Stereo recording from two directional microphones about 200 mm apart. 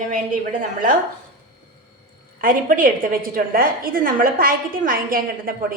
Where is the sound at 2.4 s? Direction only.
40° right (ahead or behind).